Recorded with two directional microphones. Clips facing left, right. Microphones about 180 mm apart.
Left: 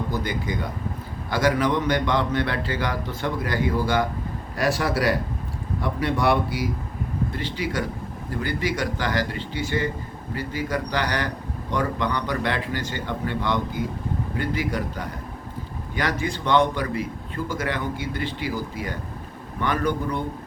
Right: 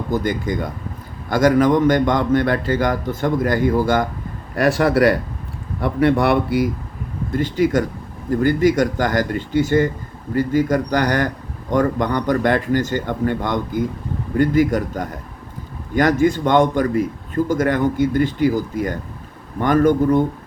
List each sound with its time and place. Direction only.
0.1 s a man's voice: 45° right (ahead or behind)
7.3 s a man's voice: 45° right (ahead or behind)